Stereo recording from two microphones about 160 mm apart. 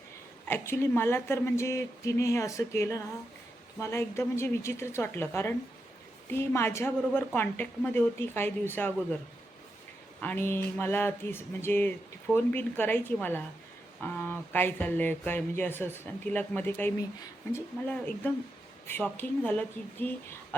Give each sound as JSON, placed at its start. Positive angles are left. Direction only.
{"t": 0.4, "sound": "speech", "side_deg": 15}
{"t": 10.2, "sound": "speech", "side_deg": 10}